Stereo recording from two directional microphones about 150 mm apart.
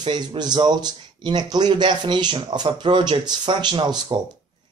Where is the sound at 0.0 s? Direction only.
30° right (ahead or behind).